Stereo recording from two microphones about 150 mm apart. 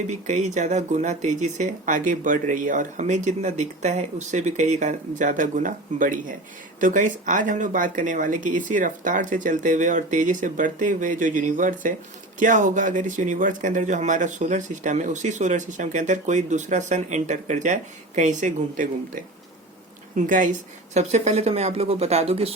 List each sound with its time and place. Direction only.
0.1 s speech: 50° right (ahead or behind)
20.9 s speech: 45° right (ahead or behind)